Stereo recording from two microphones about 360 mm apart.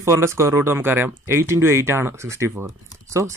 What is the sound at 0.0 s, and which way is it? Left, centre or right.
Speech, centre.